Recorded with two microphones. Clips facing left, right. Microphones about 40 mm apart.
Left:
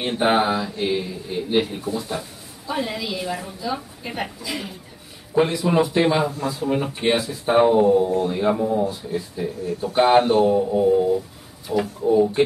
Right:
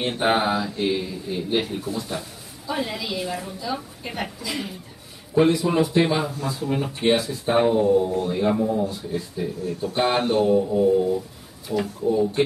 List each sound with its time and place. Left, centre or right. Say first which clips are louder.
0.0 s speech: left 2 dB; centre